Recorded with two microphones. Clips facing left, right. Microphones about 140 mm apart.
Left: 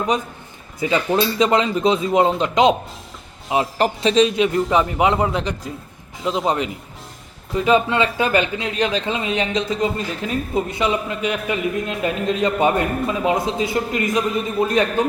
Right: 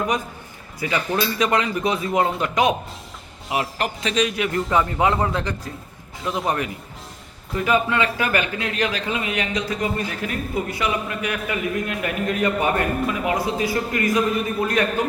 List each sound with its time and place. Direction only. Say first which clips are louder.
0.8 s speech: left 4 dB; 25° left (ahead or behind)